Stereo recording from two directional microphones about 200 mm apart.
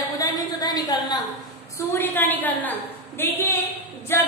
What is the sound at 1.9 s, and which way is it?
A woman's voice, 10° left (ahead or behind).